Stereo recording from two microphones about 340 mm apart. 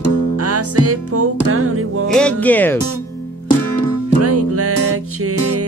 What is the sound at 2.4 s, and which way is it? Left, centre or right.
Speech, centre.